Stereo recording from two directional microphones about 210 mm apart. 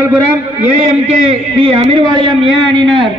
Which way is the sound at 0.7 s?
30° right (ahead or behind).